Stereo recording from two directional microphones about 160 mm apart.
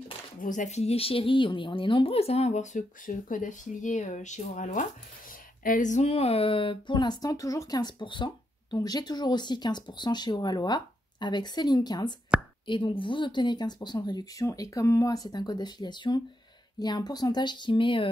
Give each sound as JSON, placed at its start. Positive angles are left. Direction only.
{"t": 0.4, "sound": "speech", "side_deg": 50}